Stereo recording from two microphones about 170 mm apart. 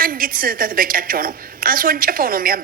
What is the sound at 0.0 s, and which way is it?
A woman's voice, 55° right (ahead or behind).